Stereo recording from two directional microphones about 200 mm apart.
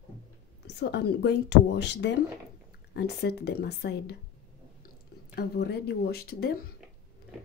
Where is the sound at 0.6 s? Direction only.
55° left (ahead or behind).